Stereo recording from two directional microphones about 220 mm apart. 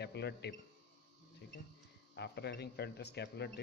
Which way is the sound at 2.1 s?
50° left (ahead or behind).